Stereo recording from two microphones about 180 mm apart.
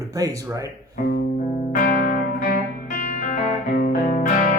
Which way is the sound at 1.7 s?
55° left (ahead or behind).